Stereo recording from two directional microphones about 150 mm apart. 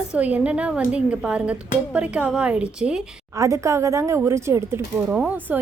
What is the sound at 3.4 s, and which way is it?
A woman's voice, 20° right (ahead or behind).